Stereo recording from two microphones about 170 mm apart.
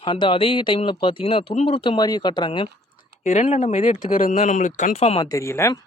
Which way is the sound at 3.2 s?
40° left (ahead or behind).